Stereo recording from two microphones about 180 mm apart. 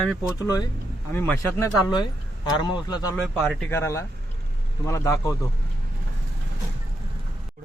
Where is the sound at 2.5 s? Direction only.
25° left (ahead or behind).